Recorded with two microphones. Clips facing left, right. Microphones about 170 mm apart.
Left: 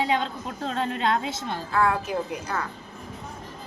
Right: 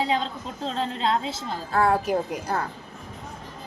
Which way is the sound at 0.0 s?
30° right (ahead or behind).